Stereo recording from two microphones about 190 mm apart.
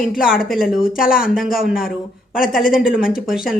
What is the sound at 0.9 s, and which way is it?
Speech, 50° left (ahead or behind).